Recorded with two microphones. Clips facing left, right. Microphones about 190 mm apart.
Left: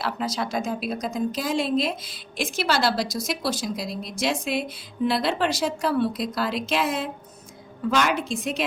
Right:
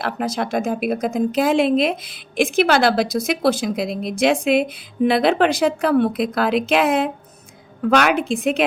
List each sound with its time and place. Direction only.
0.0 s a woman's voice: 55° right (ahead or behind)